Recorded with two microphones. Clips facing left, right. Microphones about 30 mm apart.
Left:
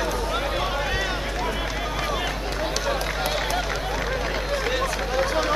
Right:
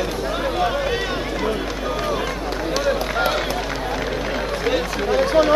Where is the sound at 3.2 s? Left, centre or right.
Centre.